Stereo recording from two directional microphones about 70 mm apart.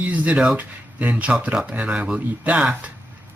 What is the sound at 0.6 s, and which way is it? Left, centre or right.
Speech, right.